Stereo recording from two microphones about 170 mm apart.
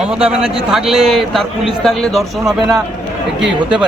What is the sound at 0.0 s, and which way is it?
A man's voice, 5° right (ahead or behind).